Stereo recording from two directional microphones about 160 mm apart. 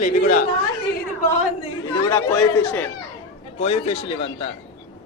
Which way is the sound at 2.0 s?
20° left (ahead or behind).